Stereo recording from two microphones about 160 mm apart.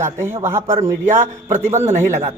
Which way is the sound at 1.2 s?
50° right (ahead or behind).